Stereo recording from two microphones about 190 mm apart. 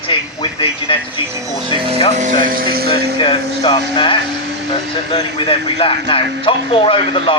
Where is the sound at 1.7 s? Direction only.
25° right (ahead or behind).